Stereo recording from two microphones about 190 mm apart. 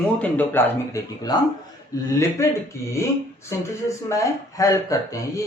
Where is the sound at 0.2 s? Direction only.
10° left (ahead or behind).